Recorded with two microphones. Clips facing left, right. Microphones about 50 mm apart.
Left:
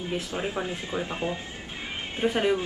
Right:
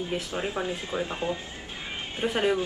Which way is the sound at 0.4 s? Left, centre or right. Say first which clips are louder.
Even; centre.